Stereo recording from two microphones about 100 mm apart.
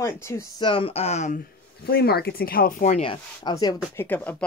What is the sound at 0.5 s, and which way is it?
Speech, 55° left (ahead or behind).